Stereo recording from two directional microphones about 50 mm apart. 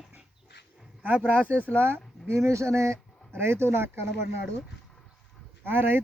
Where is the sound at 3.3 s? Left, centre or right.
Right.